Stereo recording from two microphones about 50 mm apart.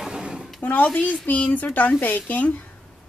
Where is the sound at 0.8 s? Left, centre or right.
Centre.